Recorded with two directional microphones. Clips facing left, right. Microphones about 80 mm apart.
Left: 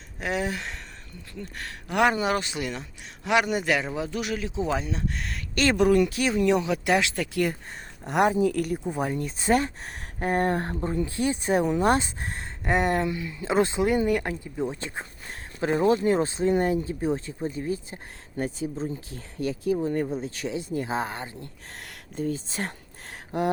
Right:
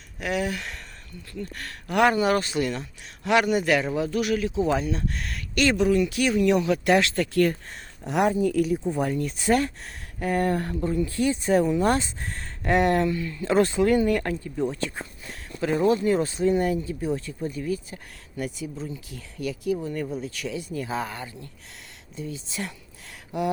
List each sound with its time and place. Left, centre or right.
0.2 s a man's voice: left
5.7 s speech: left
6.1 s a man's voice: left; by 8.8 s centre
8.8 s speech: centre
9.1 s speech: left
12.6 s speech: centre
13.1 s a man's voice: centre
21.8 s a sound: left